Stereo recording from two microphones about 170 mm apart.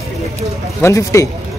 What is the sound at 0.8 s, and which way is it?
Speech, 20° left (ahead or behind).